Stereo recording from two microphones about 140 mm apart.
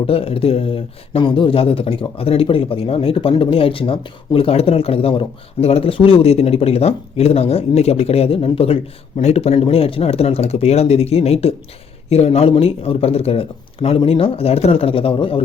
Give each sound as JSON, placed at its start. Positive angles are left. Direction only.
{"t": 0.1, "sound": "speech", "side_deg": 45}